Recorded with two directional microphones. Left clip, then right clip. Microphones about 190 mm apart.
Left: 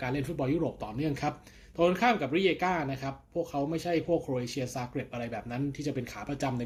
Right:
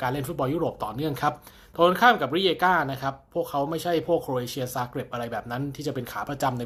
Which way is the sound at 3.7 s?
35° right (ahead or behind).